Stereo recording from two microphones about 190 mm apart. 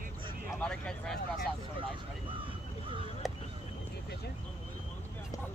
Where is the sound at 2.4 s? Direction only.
25° right (ahead or behind).